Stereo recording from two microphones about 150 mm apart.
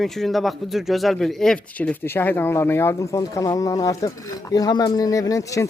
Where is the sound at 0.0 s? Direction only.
Centre (ahead or behind).